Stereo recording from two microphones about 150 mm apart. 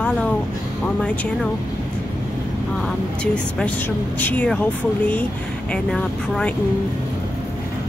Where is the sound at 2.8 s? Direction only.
5° left (ahead or behind).